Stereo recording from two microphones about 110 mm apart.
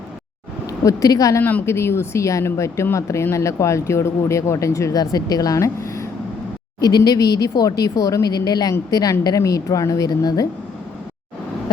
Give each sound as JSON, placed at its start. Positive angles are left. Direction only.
{"t": 0.9, "sound": "speech", "side_deg": 30}
{"t": 1.4, "sound": "speech", "side_deg": 20}